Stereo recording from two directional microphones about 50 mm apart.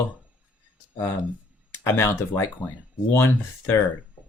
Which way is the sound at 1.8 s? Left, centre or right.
Left.